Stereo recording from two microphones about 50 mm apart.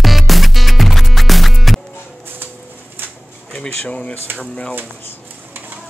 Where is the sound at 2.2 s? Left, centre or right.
Right.